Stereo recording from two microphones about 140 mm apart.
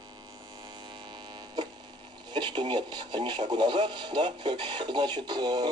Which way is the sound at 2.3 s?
35° right (ahead or behind).